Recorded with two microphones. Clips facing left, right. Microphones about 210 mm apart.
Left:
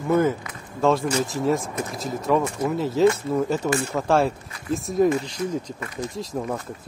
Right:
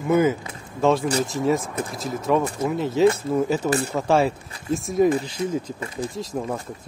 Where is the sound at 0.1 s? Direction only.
5° right (ahead or behind).